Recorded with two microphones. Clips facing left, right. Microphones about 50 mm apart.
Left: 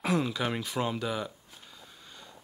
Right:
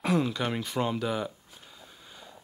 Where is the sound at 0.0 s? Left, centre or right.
Centre.